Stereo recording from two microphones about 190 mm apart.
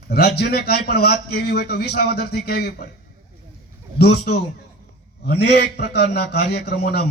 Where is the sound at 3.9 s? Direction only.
60° left (ahead or behind).